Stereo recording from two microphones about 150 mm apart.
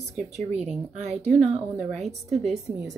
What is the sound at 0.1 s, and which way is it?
Speech, 50° right (ahead or behind).